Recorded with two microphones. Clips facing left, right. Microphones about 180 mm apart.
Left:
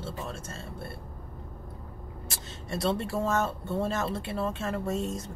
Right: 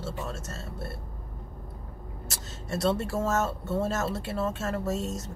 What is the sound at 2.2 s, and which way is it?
Speech, centre (ahead or behind).